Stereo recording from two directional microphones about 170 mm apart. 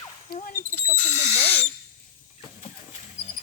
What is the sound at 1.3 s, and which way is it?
Owl, 40° left (ahead or behind).